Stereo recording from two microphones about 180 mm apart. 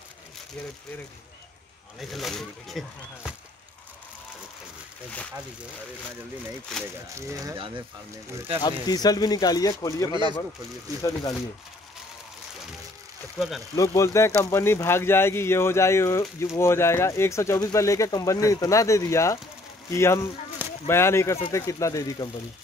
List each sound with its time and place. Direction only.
2.0 s speech: centre (ahead or behind)
6.8 s speech: 15° right (ahead or behind)
8.6 s speech: 20° left (ahead or behind)
13.7 s speech: 15° left (ahead or behind)